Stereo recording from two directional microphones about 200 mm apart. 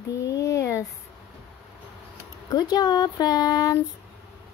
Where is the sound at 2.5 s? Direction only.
20° left (ahead or behind).